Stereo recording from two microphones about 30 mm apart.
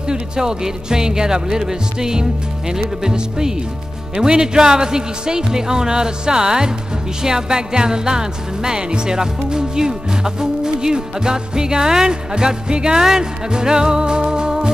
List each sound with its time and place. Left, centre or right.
0.1 s music: right
13.0 s music: centre
13.5 s music: right